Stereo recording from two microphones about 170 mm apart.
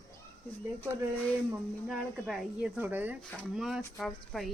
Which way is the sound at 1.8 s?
5° right (ahead or behind).